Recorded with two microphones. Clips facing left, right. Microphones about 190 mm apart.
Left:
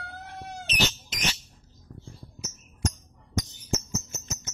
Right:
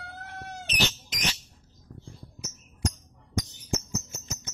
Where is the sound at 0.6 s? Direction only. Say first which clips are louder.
Left 1 dB; 15° right (ahead or behind).